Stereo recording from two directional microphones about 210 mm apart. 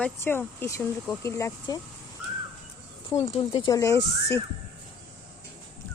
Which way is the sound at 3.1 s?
30° left (ahead or behind).